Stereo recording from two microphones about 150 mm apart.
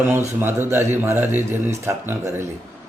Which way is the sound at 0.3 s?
15° right (ahead or behind).